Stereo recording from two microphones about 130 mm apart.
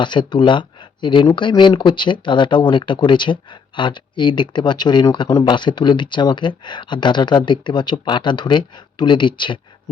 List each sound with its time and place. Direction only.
0.0 s speech: 35° left (ahead or behind)